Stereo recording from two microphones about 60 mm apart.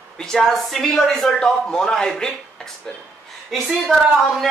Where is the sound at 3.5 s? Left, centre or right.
Centre.